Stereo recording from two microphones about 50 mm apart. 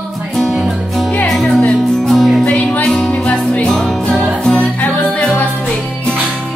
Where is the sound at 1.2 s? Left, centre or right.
Centre.